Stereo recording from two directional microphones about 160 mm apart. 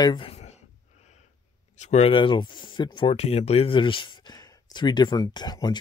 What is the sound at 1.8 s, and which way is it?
Speech, 40° left (ahead or behind).